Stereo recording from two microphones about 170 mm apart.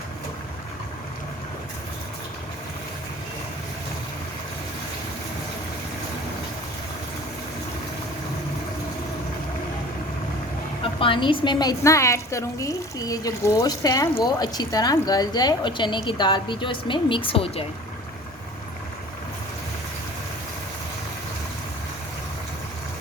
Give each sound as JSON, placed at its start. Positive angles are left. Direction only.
{"t": 11.0, "sound": "a woman's voice", "side_deg": 30}